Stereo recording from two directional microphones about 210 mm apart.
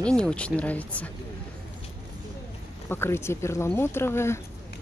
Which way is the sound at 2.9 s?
10° left (ahead or behind).